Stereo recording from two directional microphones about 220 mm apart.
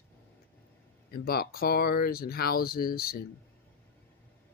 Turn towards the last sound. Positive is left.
turn(degrees=40)  # may be behind; listen again after turning